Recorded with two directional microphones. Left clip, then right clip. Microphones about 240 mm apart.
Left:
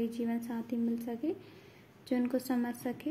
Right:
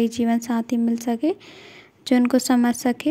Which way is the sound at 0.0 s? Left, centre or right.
Right.